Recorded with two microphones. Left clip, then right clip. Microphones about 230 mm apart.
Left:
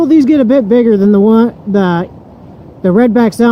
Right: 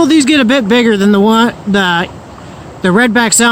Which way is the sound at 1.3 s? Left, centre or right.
Right.